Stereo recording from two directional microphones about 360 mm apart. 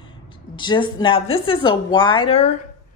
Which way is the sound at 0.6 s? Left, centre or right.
Centre.